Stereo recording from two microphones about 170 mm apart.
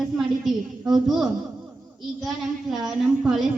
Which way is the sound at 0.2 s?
Centre (ahead or behind).